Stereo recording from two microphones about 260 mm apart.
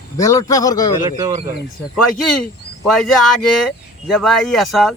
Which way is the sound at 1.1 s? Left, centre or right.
Centre.